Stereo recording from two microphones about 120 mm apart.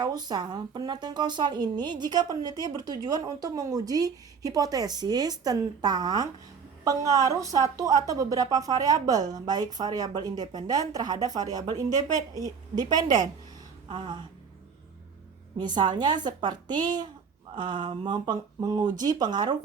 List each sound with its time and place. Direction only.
0.0 s speech: 35° right (ahead or behind)
13.8 s a sound: 40° right (ahead or behind)
15.5 s speech: 40° right (ahead or behind)